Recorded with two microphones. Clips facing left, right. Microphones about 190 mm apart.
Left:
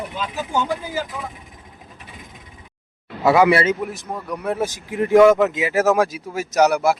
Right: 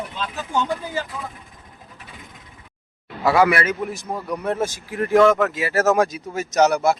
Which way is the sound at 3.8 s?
Centre (ahead or behind).